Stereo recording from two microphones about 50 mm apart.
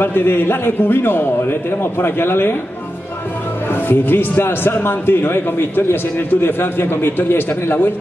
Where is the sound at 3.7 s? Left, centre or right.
Left.